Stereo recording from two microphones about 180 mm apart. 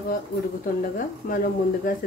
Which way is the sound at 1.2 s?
55° left (ahead or behind).